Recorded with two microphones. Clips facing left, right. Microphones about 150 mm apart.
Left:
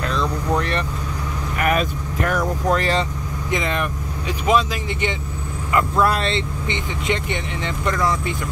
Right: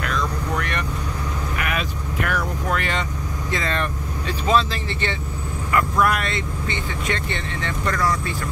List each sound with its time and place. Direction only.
0.0 s vehicle: 30° left (ahead or behind)
1.6 s speech: 40° left (ahead or behind)
3.4 s speech: 15° left (ahead or behind)